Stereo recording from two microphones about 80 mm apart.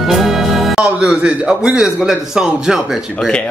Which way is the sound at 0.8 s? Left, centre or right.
Centre.